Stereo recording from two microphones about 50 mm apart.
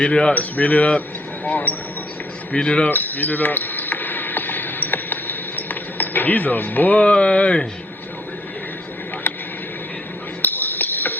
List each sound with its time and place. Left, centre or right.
0.0 s speech: left
0.3 s speech: left
2.5 s speech: left
2.9 s basketball bounce: left
10.4 s music: left